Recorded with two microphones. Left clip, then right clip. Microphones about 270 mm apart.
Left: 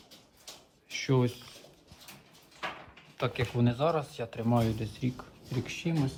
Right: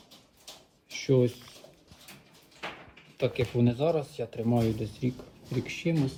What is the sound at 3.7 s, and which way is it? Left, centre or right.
Speech, centre.